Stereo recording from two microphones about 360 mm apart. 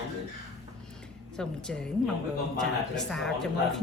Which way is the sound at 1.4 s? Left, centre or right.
Centre.